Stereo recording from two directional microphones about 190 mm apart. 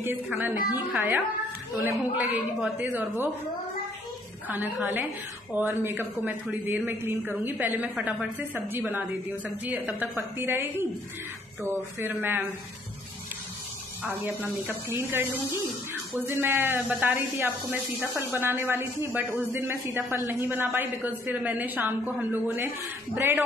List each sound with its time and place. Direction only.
0.0 s speech: 10° right (ahead or behind)
4.5 s speech: 10° right (ahead or behind)
14.2 s speech: 10° right (ahead or behind)